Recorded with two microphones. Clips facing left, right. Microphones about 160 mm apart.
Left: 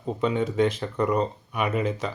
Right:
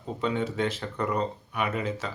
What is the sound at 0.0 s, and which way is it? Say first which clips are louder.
Speech: left 4 dB; 15° left (ahead or behind).